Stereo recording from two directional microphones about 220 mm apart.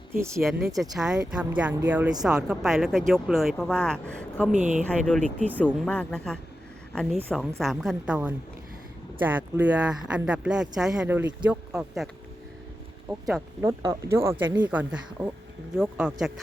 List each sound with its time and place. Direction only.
0.1 s speech: 10° right (ahead or behind)
0.8 s speech: centre (ahead or behind)
4.5 s speech: 35° right (ahead or behind)
4.9 s speech: 5° left (ahead or behind)
13.1 s speech: centre (ahead or behind)
13.6 s speech: 15° right (ahead or behind)